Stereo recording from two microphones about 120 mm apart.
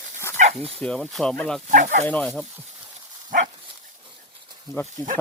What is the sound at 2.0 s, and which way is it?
Speech, 10° left (ahead or behind).